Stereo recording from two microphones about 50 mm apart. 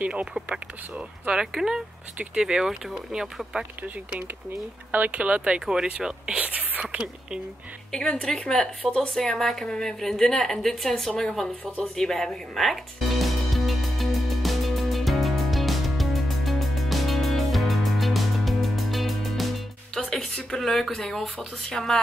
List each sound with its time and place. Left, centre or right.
0.0 s speech: right
3.5 s speech: right
5.1 s speech: right
6.4 s speech: right
6.8 s speech: centre
7.9 s a woman's voice: centre
11.8 s music: centre
20.5 s a woman's voice: centre